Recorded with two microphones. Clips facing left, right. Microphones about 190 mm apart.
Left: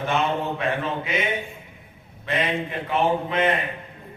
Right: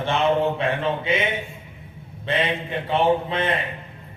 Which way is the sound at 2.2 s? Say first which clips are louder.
Right 1 dB; 30° right (ahead or behind).